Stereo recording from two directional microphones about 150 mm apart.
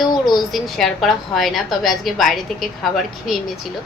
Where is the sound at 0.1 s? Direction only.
30° left (ahead or behind).